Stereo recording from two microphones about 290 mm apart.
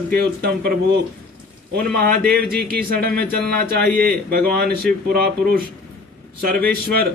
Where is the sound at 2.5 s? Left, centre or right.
Right.